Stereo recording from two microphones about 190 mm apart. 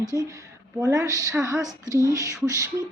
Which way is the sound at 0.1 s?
15° right (ahead or behind).